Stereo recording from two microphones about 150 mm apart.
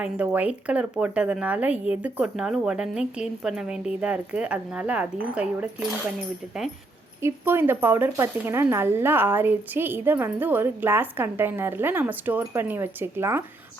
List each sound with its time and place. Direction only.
0.0 s speech: 10° right (ahead or behind)
7.2 s speech: 15° right (ahead or behind)